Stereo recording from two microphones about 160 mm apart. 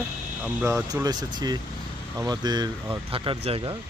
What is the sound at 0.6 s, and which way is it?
Speech, 15° right (ahead or behind).